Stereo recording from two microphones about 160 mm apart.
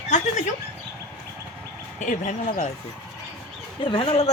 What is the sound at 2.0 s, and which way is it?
Speech, 55° left (ahead or behind).